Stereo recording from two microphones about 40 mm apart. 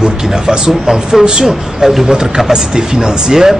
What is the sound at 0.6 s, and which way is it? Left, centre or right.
Speech, centre.